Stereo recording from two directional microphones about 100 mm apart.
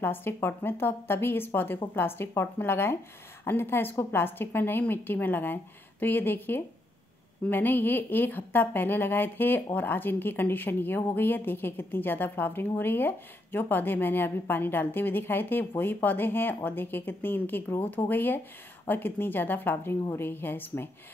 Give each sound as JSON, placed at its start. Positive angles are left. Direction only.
{"t": 0.0, "sound": "a woman's voice", "side_deg": 20}